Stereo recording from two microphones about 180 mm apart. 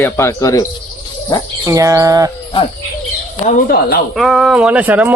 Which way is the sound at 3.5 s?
50° left (ahead or behind).